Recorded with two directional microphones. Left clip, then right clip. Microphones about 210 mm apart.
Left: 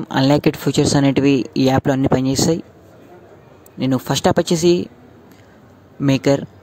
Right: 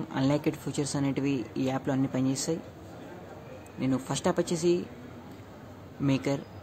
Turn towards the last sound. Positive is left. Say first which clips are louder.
# left 13 dB
turn(degrees=40)  # may be behind; listen again after turning